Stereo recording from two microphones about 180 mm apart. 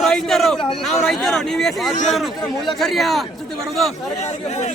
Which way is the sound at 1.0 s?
Centre (ahead or behind).